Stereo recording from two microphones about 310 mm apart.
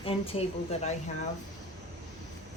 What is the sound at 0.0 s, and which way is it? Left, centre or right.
Speech, centre.